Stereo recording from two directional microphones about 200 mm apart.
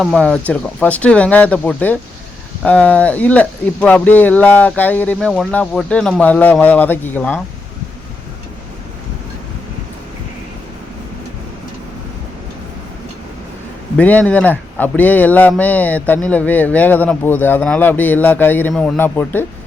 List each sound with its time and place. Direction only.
0.0 s speech: centre (ahead or behind)
13.9 s speech: 10° left (ahead or behind)